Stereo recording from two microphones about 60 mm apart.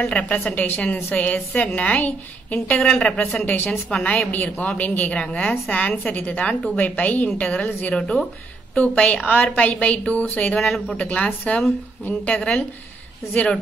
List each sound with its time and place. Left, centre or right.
0.0 s a woman's voice: centre
3.4 s a woman's voice: left
3.9 s a woman's voice: centre
10.6 s speech: centre
11.1 s a woman's voice: left